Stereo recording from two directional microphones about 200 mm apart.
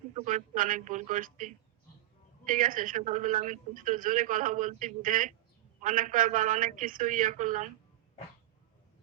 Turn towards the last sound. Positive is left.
turn(degrees=-40)  # may be behind; listen again after turning